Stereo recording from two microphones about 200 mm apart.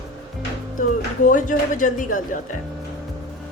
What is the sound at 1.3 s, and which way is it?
Speech, 40° left (ahead or behind).